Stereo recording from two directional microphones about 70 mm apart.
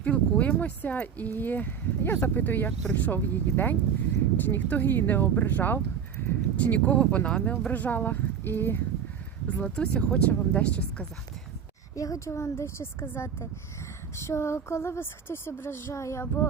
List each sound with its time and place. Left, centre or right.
0.0 s speech: centre
6.6 s speech: centre
9.6 s speech: centre
11.9 s a woman's voice: left